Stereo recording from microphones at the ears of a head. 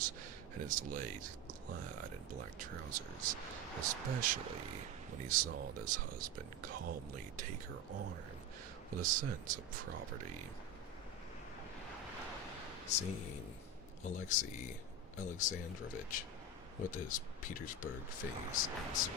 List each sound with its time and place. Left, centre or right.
0.5 s speech: right
12.9 s speech: left